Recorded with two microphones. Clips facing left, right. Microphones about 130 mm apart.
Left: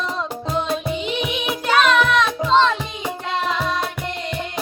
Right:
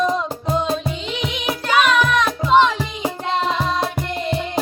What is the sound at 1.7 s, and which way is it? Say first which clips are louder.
Music: even; 10° right (ahead or behind).